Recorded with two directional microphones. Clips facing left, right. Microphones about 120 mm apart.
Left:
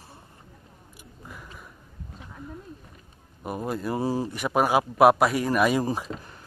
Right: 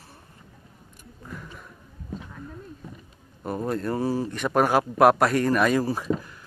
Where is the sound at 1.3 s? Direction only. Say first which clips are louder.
Right 4 dB; 5° left (ahead or behind).